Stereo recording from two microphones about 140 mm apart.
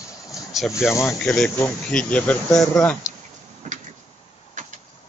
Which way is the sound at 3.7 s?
60° right (ahead or behind).